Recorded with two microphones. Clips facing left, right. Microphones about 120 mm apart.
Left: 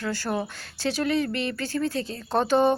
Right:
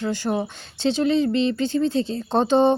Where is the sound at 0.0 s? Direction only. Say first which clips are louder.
Right 4 dB; 20° right (ahead or behind).